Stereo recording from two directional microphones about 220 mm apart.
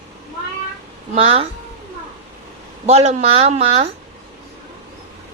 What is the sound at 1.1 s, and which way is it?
Speech, 25° right (ahead or behind).